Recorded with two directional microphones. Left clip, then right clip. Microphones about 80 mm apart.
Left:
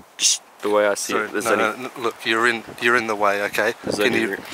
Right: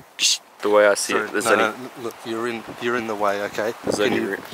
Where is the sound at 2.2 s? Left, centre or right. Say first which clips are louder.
Left 9 dB; centre.